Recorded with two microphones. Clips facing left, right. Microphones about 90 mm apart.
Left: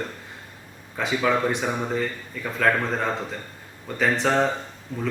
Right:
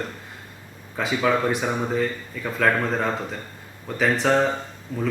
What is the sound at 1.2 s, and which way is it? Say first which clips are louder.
Speech: right 1 dB; centre (ahead or behind).